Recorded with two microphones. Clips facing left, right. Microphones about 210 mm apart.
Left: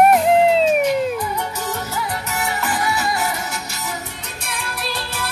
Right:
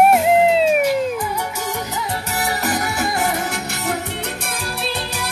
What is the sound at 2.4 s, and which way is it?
Music, 40° right (ahead or behind).